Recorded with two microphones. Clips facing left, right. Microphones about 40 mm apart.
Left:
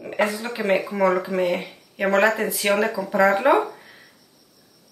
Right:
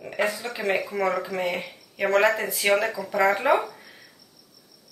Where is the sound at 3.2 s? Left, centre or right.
Centre.